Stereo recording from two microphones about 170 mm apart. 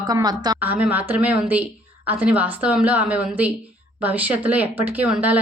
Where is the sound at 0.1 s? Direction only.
25° right (ahead or behind).